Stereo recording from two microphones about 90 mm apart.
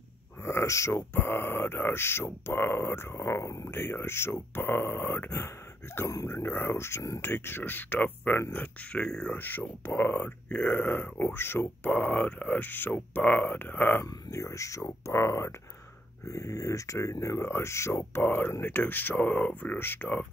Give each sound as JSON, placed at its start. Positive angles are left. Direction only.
{"t": 0.4, "sound": "speech", "side_deg": 30}
{"t": 9.0, "sound": "speech", "side_deg": 10}
{"t": 9.3, "sound": "speech", "side_deg": 20}
{"t": 14.0, "sound": "speech", "side_deg": 35}